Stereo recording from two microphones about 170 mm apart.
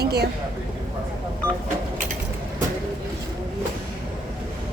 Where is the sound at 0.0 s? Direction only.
70° right (ahead or behind).